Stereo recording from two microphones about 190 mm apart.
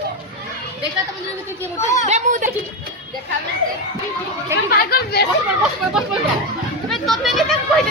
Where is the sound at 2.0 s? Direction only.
40° right (ahead or behind).